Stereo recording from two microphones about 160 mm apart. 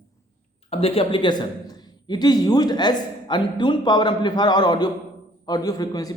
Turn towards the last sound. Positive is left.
turn(degrees=25)  # may be behind; listen again after turning